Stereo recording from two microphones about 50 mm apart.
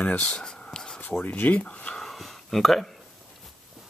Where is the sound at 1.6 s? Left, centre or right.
Left.